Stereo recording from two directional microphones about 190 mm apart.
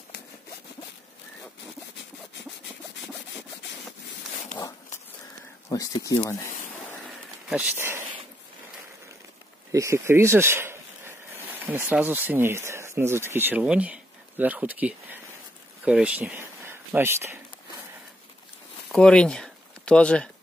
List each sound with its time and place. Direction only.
5.7 s speech: 20° left (ahead or behind)
7.4 s speech: 5° right (ahead or behind)
9.7 s speech: 15° right (ahead or behind)
18.9 s speech: 5° left (ahead or behind)